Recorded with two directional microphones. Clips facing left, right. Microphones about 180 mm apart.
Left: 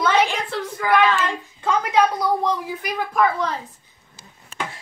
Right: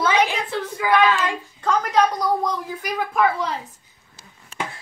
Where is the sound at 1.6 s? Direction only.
5° left (ahead or behind).